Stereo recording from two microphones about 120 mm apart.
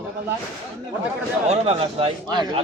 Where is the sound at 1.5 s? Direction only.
60° right (ahead or behind).